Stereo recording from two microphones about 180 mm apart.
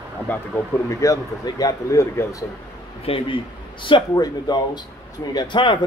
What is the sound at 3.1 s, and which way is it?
Speech, 30° left (ahead or behind).